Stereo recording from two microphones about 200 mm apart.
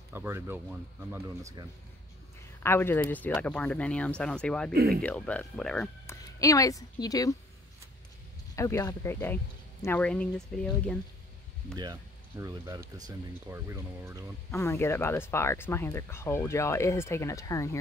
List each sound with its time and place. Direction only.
0.1 s speech: 10° right (ahead or behind)
2.6 s speech: 10° left (ahead or behind)
4.7 s speech: 50° right (ahead or behind)
5.0 s speech: 5° left (ahead or behind)
6.4 s speech: 15° left (ahead or behind)
8.5 s speech: 15° left (ahead or behind)
11.7 s speech: 20° right (ahead or behind)
14.5 s speech: 15° left (ahead or behind)